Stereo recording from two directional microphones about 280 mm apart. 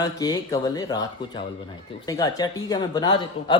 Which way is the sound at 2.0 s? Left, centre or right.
Centre.